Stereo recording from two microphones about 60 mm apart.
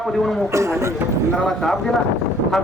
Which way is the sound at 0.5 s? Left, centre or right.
Right.